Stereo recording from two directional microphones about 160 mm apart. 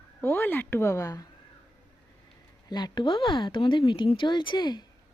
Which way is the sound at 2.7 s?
25° left (ahead or behind).